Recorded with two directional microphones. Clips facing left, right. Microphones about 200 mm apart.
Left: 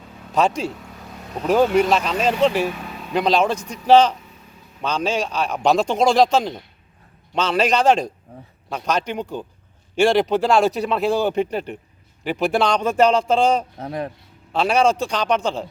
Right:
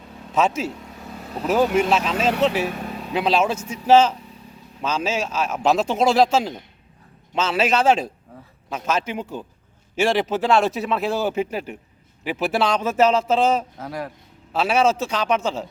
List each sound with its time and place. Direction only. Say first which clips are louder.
0.3 s speech: left 1 dB; 5° right (ahead or behind)
13.7 s speech: left 3 dB; 25° left (ahead or behind)
14.5 s speech: left 1 dB; 5° right (ahead or behind)